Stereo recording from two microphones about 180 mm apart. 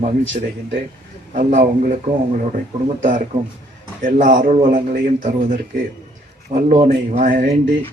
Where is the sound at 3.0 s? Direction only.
45° right (ahead or behind).